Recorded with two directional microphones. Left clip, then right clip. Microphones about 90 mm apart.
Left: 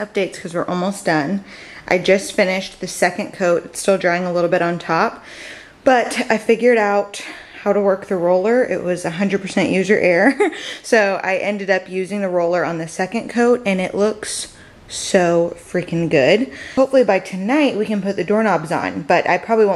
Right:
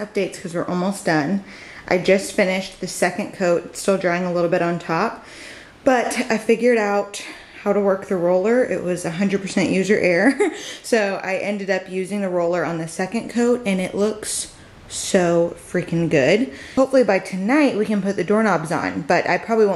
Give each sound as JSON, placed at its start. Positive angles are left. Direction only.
{"t": 0.0, "sound": "speech", "side_deg": 20}